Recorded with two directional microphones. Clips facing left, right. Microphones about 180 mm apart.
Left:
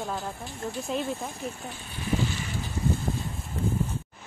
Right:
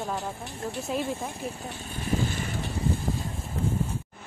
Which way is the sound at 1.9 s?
50° right (ahead or behind).